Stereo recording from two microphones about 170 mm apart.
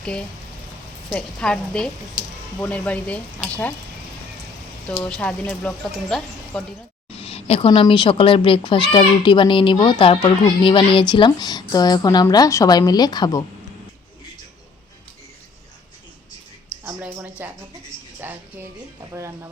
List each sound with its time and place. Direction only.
0.0 s speech: 5° left (ahead or behind)
4.9 s speech: 10° left (ahead or behind)
7.1 s a woman's voice: 35° left (ahead or behind)
16.8 s speech: 10° right (ahead or behind)